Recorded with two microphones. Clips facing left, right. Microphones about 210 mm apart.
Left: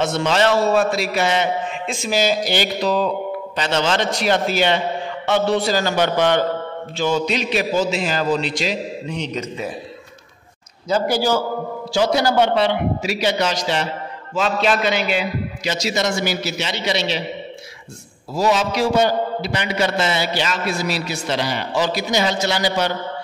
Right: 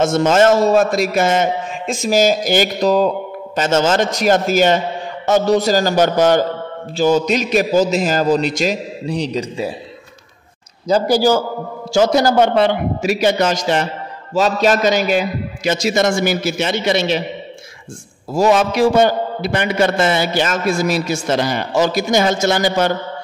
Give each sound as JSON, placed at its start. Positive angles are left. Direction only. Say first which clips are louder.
{"t": 0.0, "sound": "a man's voice", "louder": "right 5 dB", "side_deg": -45}
{"t": 10.9, "sound": "a man's voice", "louder": "right 5 dB", "side_deg": -40}
{"t": 18.3, "sound": "a man's voice", "louder": "right 5 dB", "side_deg": -50}